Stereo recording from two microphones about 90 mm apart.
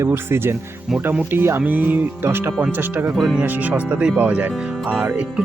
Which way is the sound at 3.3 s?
20° right (ahead or behind).